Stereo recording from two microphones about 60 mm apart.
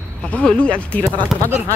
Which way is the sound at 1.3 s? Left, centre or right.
Centre.